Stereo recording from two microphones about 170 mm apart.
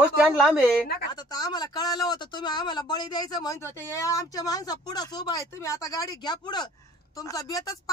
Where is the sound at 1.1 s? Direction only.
25° left (ahead or behind).